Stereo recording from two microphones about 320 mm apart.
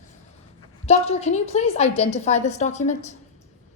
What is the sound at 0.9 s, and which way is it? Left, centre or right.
A woman's voice, left.